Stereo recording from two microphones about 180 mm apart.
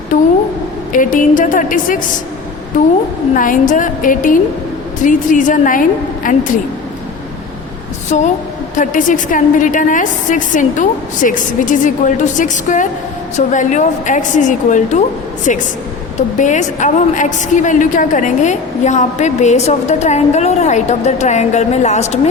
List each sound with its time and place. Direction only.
0.9 s a woman's voice: 50° left (ahead or behind)
3.3 s a woman's voice: 45° left (ahead or behind)
8.1 s a woman's voice: 40° left (ahead or behind)